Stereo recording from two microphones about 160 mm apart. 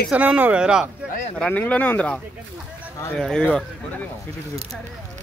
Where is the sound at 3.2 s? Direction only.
5° left (ahead or behind).